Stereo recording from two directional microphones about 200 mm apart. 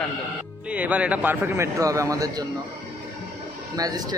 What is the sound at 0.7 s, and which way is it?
A man's voice, 5° right (ahead or behind).